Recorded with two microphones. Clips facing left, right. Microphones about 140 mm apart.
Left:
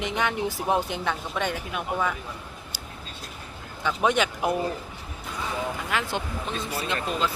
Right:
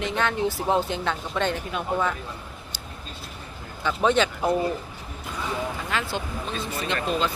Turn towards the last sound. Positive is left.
turn(degrees=5)  # may be behind; listen again after turning